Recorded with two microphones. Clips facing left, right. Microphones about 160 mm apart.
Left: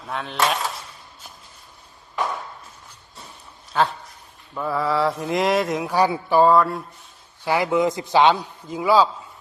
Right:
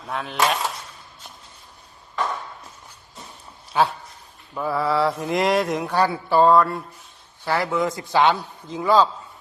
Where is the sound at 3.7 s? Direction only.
10° right (ahead or behind).